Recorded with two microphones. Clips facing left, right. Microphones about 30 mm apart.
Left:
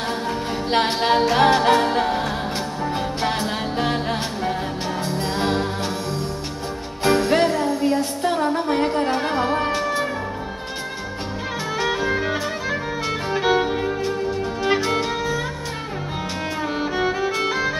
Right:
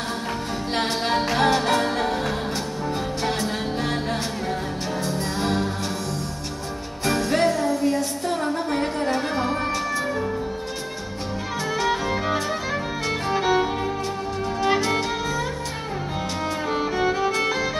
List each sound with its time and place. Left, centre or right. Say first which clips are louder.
0.7 s music: left 5 dB; left
7.1 s music: left 3 dB; left
11.7 s music: left 2 dB; centre
16.6 s music: even; centre